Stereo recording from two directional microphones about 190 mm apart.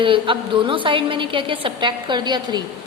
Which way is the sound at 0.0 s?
25° right (ahead or behind).